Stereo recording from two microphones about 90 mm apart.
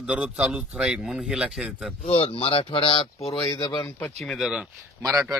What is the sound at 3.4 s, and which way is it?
Speech, 45° left (ahead or behind).